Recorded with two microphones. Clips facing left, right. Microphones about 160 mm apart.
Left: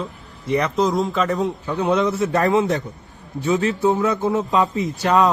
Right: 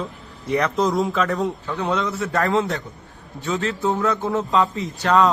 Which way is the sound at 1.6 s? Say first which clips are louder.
Left 4 dB; 20° left (ahead or behind).